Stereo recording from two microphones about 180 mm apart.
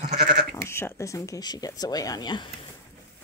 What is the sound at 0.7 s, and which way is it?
Speech, 15° left (ahead or behind).